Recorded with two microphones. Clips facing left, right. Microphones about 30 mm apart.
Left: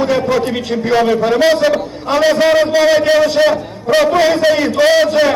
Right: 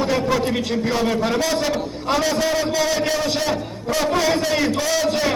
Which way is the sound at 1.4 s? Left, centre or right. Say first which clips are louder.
Left 9 dB; left.